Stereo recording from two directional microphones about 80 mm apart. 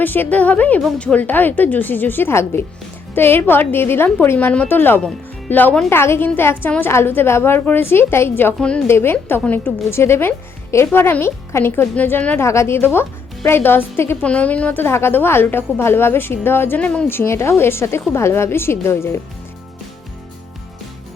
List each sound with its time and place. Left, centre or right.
0.0 s a woman's voice: left
9.4 s a woman's voice: centre
9.9 s a woman's voice: left
12.4 s speech: left
14.3 s a woman's voice: centre
17.1 s speech: left